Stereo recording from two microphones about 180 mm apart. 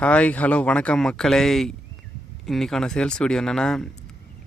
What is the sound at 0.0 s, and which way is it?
Speech, 5° left (ahead or behind).